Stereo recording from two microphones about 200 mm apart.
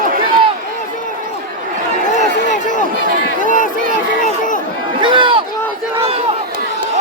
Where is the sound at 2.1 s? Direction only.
40° left (ahead or behind).